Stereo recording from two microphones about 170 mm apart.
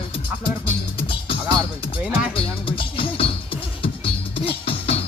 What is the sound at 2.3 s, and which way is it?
Music, 35° left (ahead or behind).